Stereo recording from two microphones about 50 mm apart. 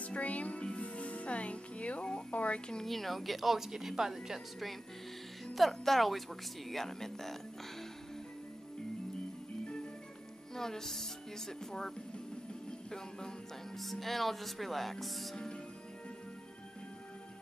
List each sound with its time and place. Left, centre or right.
0.0 s music: left
2.8 s speech: centre
10.5 s speech: centre
13.7 s speech: centre
15.3 s speech: centre